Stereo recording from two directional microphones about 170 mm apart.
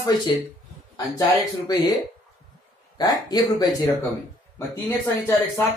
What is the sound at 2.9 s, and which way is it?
Speech, 20° left (ahead or behind).